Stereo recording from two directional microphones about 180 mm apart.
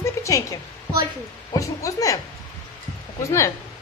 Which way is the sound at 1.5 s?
20° left (ahead or behind).